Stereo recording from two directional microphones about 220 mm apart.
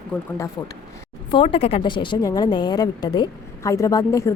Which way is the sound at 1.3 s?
25° left (ahead or behind).